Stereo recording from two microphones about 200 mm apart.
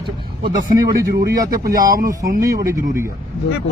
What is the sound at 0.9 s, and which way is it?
Speech, 50° right (ahead or behind).